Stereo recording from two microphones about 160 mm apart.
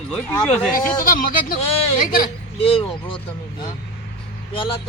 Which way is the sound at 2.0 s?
60° left (ahead or behind).